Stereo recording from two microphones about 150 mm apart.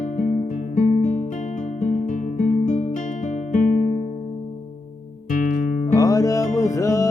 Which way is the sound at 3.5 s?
60° left (ahead or behind).